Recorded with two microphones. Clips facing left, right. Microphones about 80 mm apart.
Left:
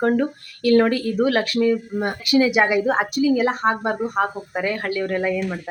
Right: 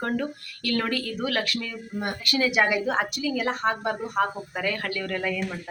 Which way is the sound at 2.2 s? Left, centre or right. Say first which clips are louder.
Left 6 dB; centre.